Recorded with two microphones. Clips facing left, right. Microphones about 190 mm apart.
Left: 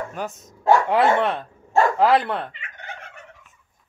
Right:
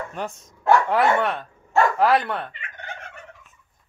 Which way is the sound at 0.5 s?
20° left (ahead or behind).